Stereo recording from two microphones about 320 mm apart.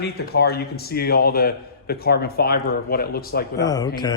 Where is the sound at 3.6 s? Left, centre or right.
Centre.